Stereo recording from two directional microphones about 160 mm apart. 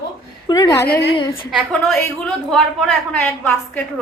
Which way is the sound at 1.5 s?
Centre (ahead or behind).